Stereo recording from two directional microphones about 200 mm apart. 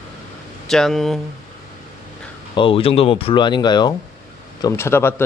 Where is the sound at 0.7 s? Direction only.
Centre (ahead or behind).